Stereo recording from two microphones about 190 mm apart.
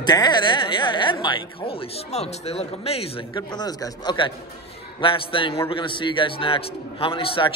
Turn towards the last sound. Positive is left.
turn(degrees=30)  # may be behind; listen again after turning